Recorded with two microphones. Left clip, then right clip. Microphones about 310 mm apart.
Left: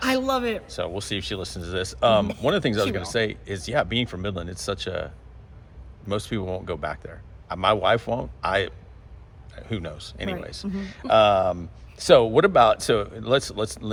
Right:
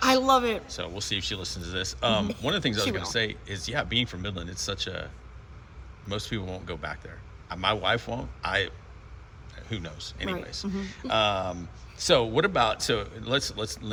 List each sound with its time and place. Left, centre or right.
0.0 s a man's voice: centre
0.9 s a man's voice: centre